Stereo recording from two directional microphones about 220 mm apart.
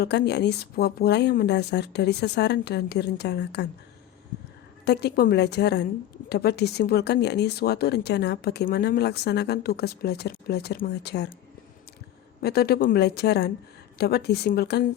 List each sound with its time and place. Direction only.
0.0 s speech: 50° left (ahead or behind)
4.9 s speech: 45° left (ahead or behind)
12.4 s speech: 45° left (ahead or behind)